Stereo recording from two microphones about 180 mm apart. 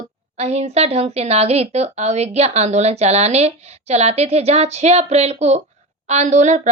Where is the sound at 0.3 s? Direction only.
35° right (ahead or behind).